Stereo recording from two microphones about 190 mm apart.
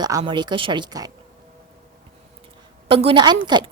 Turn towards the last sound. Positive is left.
turn(degrees=-25)  # may be behind; listen again after turning